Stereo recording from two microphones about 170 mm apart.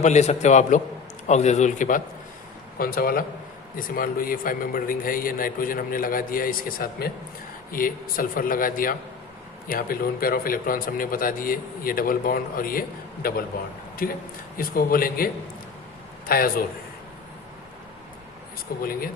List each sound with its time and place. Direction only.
0.0 s a man's voice: 45° left (ahead or behind)
2.7 s a man's voice: 60° left (ahead or behind)
18.8 s speech: 60° left (ahead or behind)